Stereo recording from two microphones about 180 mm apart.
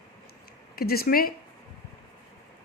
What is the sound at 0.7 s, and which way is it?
Speech, 60° left (ahead or behind).